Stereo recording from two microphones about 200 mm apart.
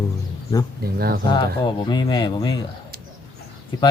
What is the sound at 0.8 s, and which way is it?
Speech, 50° right (ahead or behind).